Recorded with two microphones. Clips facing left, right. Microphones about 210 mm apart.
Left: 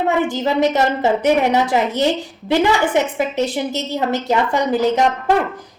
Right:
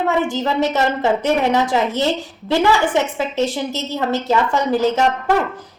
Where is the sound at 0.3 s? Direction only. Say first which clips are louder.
Left 2 dB; 15° left (ahead or behind).